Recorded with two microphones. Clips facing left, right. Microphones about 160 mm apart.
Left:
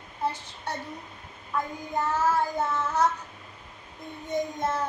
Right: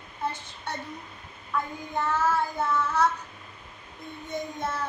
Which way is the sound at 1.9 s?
40° left (ahead or behind).